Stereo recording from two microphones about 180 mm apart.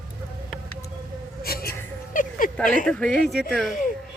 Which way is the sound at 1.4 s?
55° left (ahead or behind).